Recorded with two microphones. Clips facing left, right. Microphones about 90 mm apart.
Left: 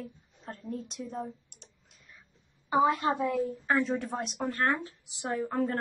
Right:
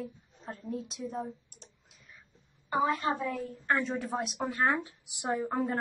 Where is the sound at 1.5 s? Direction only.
35° right (ahead or behind).